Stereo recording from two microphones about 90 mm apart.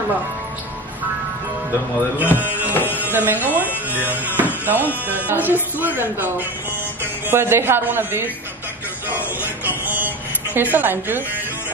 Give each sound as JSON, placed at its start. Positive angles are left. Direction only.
{"t": 2.1, "sound": "speech", "side_deg": -20}
{"t": 2.7, "sound": "music", "side_deg": 20}
{"t": 3.0, "sound": "speech", "side_deg": -20}